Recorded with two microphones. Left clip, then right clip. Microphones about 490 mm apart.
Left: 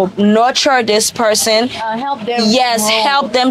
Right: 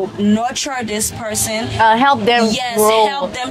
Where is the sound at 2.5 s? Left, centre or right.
Left.